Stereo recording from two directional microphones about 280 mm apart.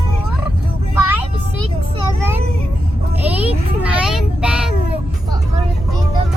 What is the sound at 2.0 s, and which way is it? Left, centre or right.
Child singing, centre.